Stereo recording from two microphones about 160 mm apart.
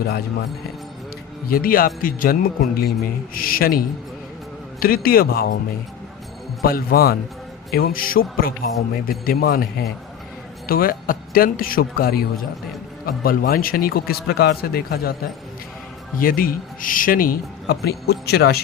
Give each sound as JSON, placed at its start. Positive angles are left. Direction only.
{"t": 1.5, "sound": "a man's voice", "side_deg": 65}
{"t": 6.6, "sound": "a man's voice", "side_deg": 70}
{"t": 16.1, "sound": "speech", "side_deg": 65}